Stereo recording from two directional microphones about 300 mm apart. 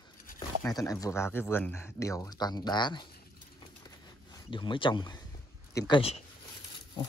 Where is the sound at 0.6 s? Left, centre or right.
Centre.